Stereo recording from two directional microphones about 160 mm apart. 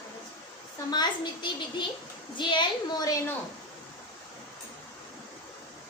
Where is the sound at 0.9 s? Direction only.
25° left (ahead or behind).